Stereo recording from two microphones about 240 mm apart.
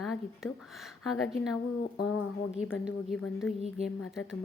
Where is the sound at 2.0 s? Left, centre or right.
Left.